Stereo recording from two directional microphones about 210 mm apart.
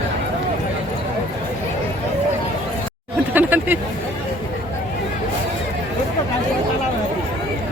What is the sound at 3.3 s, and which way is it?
Speech, 10° right (ahead or behind).